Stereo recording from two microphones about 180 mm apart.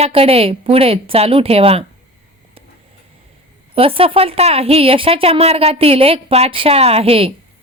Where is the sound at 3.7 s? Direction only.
30° right (ahead or behind).